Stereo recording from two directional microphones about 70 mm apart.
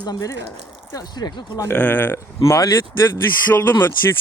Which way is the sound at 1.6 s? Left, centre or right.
Left.